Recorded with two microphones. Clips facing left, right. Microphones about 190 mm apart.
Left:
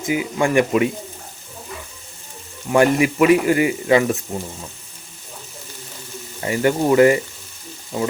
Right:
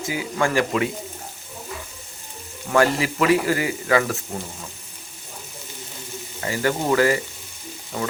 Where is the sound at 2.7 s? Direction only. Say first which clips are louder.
Left 4 dB; 20° left (ahead or behind).